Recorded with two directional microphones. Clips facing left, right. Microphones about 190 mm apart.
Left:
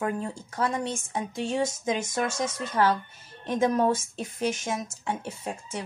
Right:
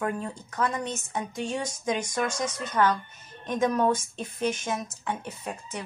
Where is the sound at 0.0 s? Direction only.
25° left (ahead or behind).